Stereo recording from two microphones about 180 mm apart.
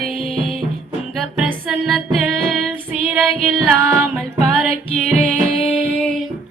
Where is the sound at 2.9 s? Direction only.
5° right (ahead or behind).